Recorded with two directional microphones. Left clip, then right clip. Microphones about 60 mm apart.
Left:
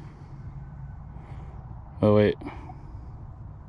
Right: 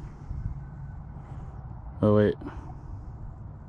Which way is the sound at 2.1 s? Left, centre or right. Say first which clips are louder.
Left 2 dB; right.